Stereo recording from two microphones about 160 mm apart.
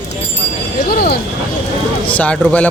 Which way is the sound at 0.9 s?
75° left (ahead or behind).